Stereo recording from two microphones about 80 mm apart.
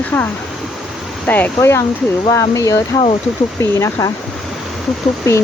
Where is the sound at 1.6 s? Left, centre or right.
Left.